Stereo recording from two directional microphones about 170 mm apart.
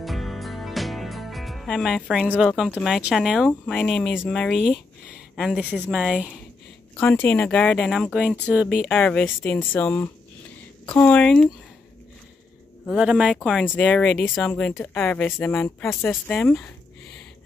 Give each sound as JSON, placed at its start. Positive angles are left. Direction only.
{"t": 0.0, "sound": "speech", "side_deg": 0}
{"t": 7.0, "sound": "speech", "side_deg": 10}
{"t": 8.9, "sound": "speech", "side_deg": 10}
{"t": 12.9, "sound": "speech", "side_deg": -5}